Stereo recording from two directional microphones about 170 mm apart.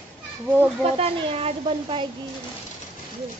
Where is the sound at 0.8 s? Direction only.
35° right (ahead or behind).